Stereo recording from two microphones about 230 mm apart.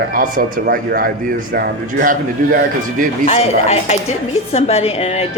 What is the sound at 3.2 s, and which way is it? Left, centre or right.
A woman's voice, left.